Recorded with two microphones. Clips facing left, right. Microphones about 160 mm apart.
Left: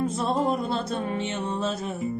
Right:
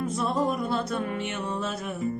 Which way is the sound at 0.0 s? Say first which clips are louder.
Left 2 dB; 30° left (ahead or behind).